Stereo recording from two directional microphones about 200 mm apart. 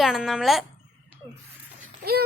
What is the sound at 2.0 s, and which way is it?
Speech, 50° right (ahead or behind).